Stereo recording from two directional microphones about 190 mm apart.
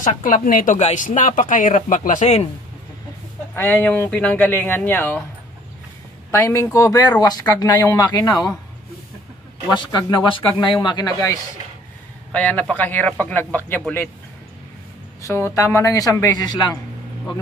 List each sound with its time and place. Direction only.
0.0 s speech: 45° left (ahead or behind)
3.5 s speech: 10° left (ahead or behind)
6.3 s speech: 15° left (ahead or behind)
9.8 s speech: 20° left (ahead or behind)
12.3 s speech: 5° left (ahead or behind)
15.2 s speech: 15° left (ahead or behind)